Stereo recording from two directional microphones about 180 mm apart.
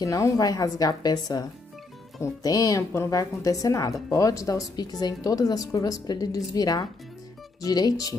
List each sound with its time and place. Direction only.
0.0 s a woman's voice: 20° left (ahead or behind)